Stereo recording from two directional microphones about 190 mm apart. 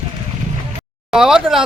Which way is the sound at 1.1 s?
5° right (ahead or behind).